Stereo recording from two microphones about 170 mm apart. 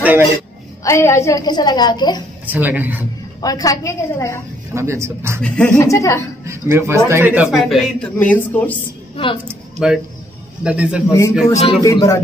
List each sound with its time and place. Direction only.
0.0 s a woman's voice: 10° right (ahead or behind)
0.8 s a woman's voice: 15° left (ahead or behind)
2.4 s a man's voice: 10° right (ahead or behind)
3.3 s a woman's voice: 20° left (ahead or behind)
4.7 s a man's voice: 15° right (ahead or behind)
5.8 s a woman's voice: 20° left (ahead or behind)
6.4 s a man's voice: 15° right (ahead or behind); by 8.7 s 10° left (ahead or behind)
9.1 s a woman's voice: 30° left (ahead or behind)
9.8 s a man's voice: 5° right (ahead or behind)
11.1 s a woman's voice: 15° left (ahead or behind)